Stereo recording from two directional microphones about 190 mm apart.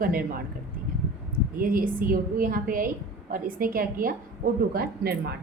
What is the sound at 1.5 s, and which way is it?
A woman's voice, 50° right (ahead or behind).